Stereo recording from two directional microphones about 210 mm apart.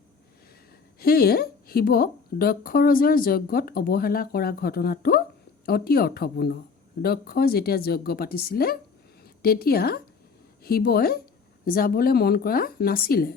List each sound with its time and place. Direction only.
0.9 s a woman's voice: 45° left (ahead or behind)